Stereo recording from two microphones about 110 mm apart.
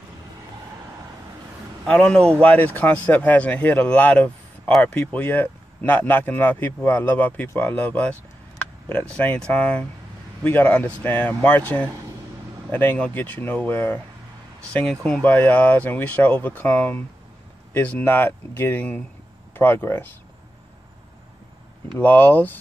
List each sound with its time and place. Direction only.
1.9 s a man's voice: 10° left (ahead or behind)
21.9 s a man's voice: 15° left (ahead or behind)